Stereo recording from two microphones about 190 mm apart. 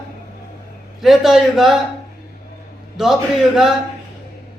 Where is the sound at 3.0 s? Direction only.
Centre (ahead or behind).